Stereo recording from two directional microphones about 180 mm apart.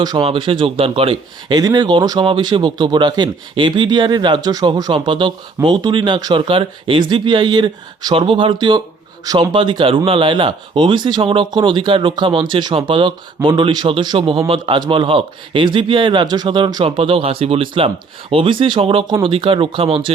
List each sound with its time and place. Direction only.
0.0 s speech: 25° right (ahead or behind)